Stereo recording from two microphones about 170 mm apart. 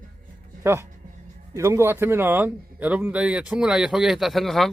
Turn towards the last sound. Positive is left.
turn(degrees=0)  # may be behind; listen again after turning